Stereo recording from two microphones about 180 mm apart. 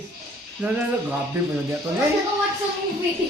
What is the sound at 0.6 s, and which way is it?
Speech, 5° right (ahead or behind).